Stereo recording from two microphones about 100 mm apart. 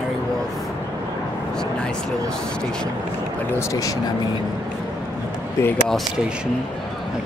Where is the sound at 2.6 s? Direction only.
10° left (ahead or behind).